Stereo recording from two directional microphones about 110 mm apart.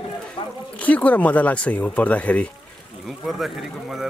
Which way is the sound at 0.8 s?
15° left (ahead or behind).